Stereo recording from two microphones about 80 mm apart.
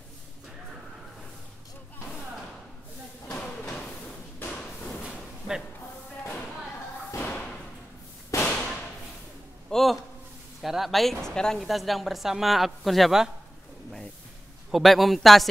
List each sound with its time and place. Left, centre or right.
3.3 s a sound: centre
7.1 s thump: left
8.4 s thump: centre
9.7 s a sound: centre
10.6 s a woman's voice: centre
14.7 s a woman's voice: centre